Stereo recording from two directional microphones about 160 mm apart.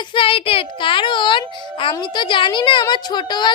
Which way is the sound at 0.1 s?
35° left (ahead or behind).